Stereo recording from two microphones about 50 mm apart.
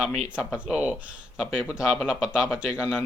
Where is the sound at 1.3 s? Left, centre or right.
Centre.